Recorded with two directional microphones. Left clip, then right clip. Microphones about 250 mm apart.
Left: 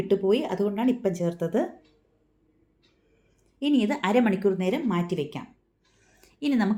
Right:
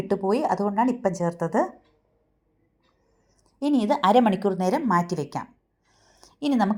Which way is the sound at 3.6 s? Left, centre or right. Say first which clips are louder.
Right 3 dB; right.